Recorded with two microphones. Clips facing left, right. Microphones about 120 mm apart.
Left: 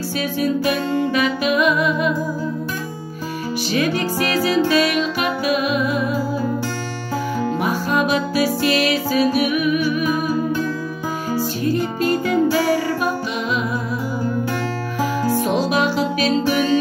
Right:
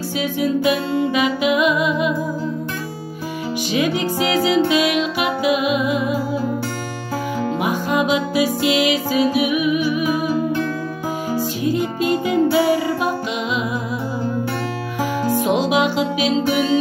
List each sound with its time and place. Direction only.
0.2 s music: 15° right (ahead or behind)
3.7 s music: 20° right (ahead or behind)
7.6 s music: 15° right (ahead or behind)
11.3 s music: 15° right (ahead or behind)
15.0 s music: 15° right (ahead or behind)